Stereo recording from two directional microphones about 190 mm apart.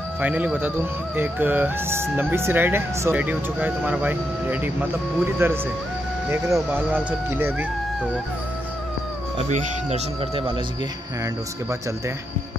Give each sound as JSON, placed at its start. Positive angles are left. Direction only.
{"t": 0.2, "sound": "speech", "side_deg": -5}
{"t": 9.5, "sound": "speech", "side_deg": -35}